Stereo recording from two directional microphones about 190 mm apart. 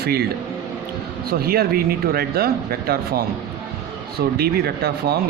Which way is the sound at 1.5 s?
50° right (ahead or behind).